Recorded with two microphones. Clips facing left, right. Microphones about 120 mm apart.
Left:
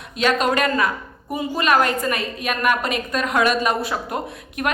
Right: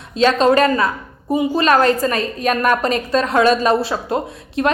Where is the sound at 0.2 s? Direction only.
30° right (ahead or behind).